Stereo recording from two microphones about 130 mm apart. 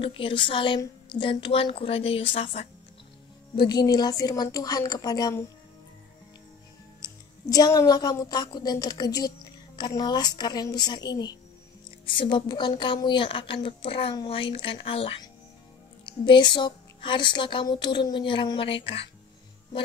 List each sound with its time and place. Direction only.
0.0 s a woman's voice: 40° left (ahead or behind)
3.5 s a woman's voice: 35° left (ahead or behind)
7.0 s a woman's voice: 30° left (ahead or behind); by 19.0 s 45° left (ahead or behind)